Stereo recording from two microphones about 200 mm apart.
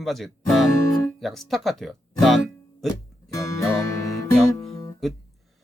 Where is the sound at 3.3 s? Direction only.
15° left (ahead or behind).